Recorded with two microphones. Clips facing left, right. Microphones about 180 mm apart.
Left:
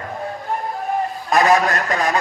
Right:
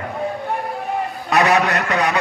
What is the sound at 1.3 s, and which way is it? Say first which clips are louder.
Speech: even; 35° left (ahead or behind).